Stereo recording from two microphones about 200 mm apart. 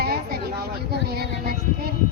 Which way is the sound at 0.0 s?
50° right (ahead or behind).